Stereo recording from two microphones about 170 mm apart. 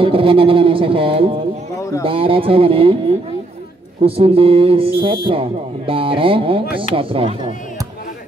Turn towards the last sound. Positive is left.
turn(degrees=-30)  # may be behind; listen again after turning